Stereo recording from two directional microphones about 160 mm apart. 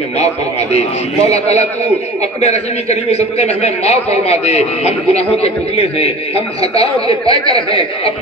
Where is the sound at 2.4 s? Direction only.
45° left (ahead or behind).